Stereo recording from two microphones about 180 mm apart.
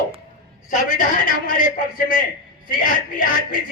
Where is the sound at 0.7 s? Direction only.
45° left (ahead or behind).